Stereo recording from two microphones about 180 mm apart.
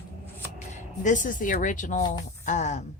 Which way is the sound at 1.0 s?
45° left (ahead or behind).